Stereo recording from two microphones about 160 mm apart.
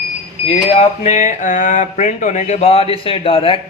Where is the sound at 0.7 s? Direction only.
45° left (ahead or behind).